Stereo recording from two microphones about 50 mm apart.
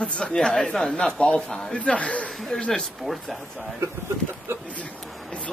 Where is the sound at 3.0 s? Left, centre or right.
Centre.